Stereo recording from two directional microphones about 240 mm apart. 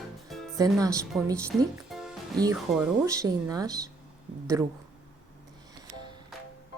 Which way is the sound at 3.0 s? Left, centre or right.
Centre.